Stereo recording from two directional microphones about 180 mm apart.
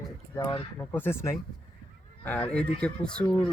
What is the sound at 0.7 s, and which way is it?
Speech, 10° left (ahead or behind).